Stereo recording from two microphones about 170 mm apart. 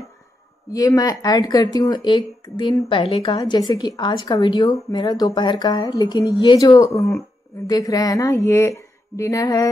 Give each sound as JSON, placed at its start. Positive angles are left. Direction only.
{"t": 0.7, "sound": "a woman's voice", "side_deg": 20}